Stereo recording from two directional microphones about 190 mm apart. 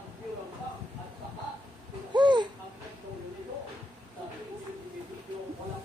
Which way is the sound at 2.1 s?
25° right (ahead or behind).